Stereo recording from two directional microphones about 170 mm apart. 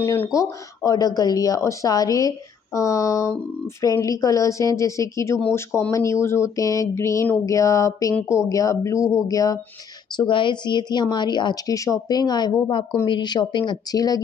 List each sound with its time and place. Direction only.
0.0 s speech: 15° left (ahead or behind)